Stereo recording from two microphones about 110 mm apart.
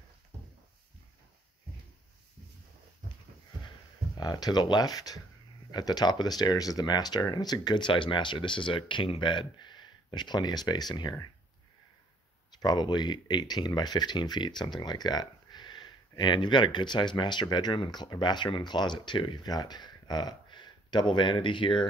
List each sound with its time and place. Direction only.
4.2 s speech: 40° left (ahead or behind)
12.5 s speech: 40° left (ahead or behind)